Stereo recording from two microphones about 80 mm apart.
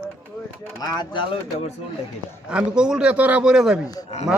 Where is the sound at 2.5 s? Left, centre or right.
Centre.